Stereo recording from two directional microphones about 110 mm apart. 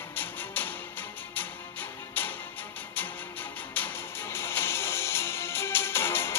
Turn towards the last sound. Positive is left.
turn(degrees=20)  # may be behind; listen again after turning